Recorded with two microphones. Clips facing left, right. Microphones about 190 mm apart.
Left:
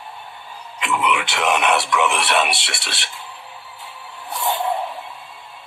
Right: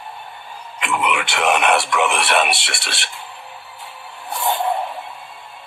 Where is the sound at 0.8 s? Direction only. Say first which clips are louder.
Even; 55° right (ahead or behind).